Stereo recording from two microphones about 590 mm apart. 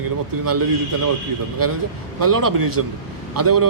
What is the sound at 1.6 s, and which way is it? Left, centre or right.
Speech, right.